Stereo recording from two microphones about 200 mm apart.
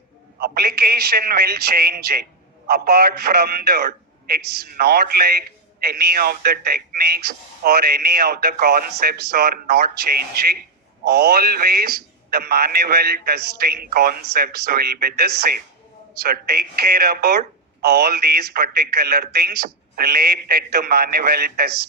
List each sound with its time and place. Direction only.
0.3 s a man's voice: 50° right (ahead or behind)